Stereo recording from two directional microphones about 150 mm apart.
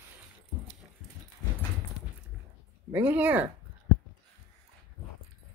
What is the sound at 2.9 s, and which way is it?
Speech, 10° right (ahead or behind).